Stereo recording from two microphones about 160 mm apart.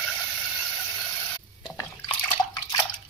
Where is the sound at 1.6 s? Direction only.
25° left (ahead or behind).